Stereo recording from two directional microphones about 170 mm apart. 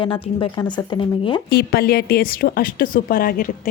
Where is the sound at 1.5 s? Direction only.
65° left (ahead or behind).